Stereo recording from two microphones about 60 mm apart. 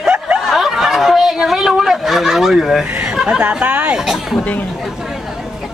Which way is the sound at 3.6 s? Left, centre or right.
Right.